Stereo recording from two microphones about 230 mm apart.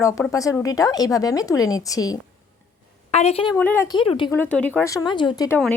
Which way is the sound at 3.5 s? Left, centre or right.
Centre.